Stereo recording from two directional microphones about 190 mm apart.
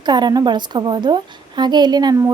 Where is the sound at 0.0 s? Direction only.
20° right (ahead or behind).